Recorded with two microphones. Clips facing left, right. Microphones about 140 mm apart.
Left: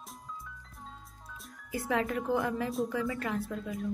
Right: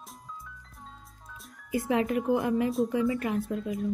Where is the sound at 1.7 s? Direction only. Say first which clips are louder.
Right 5 dB; 20° right (ahead or behind).